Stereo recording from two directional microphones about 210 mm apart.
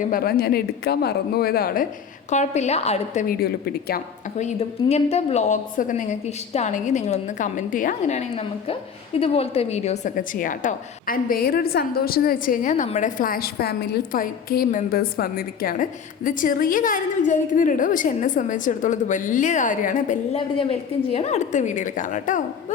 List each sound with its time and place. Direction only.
0.0 s speech: 45° left (ahead or behind)
2.3 s a woman's voice: 35° left (ahead or behind)
3.2 s speech: 45° left (ahead or behind)
4.4 s a woman's voice: 30° left (ahead or behind)